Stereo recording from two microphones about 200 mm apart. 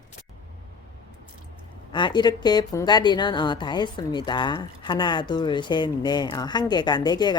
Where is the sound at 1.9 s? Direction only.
20° left (ahead or behind).